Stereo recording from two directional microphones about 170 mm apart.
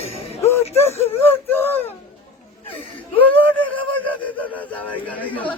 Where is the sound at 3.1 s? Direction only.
10° left (ahead or behind).